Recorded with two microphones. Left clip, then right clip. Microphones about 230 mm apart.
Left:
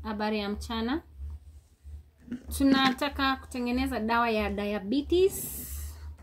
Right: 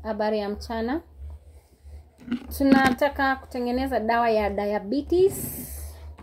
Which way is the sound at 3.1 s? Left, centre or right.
Left.